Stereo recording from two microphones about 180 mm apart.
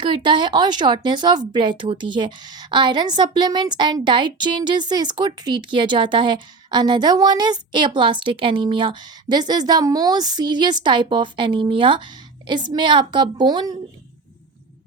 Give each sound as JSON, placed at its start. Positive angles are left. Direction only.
{"t": 0.0, "sound": "speech", "side_deg": -25}